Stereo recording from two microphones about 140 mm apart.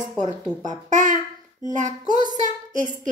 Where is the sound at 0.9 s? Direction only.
65° right (ahead or behind).